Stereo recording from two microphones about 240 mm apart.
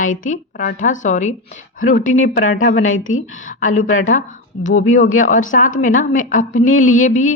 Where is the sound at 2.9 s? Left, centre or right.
Left.